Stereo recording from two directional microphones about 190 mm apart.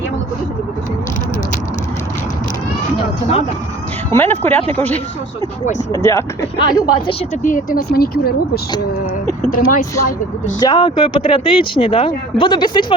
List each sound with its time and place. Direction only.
4.1 s speech: 10° left (ahead or behind)
7.4 s speech: 45° left (ahead or behind)
10.6 s speech: 20° left (ahead or behind)